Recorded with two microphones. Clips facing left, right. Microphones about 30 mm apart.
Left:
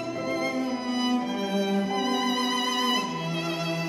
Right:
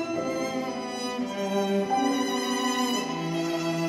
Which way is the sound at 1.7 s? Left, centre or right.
Centre.